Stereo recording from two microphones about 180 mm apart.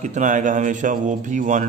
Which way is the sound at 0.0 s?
45° right (ahead or behind).